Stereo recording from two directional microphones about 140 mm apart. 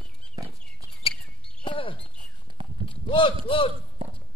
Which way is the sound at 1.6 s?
40° left (ahead or behind).